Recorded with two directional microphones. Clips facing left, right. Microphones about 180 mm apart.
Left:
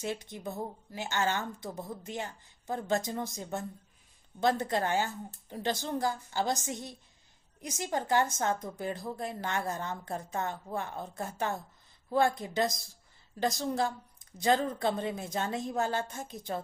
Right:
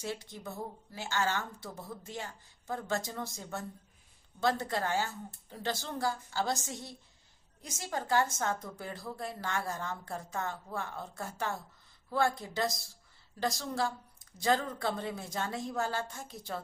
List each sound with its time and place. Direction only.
0.0 s a woman's voice: 20° left (ahead or behind)